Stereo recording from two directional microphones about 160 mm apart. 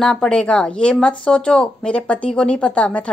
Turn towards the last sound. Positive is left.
turn(degrees=5)  # may be behind; listen again after turning